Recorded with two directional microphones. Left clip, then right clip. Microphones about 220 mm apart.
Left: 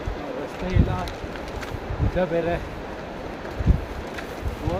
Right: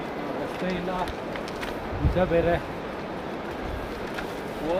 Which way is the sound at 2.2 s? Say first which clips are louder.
Left 1 dB; centre (ahead or behind).